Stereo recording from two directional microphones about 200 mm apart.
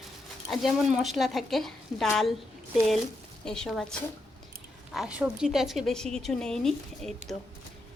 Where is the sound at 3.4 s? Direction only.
5° left (ahead or behind).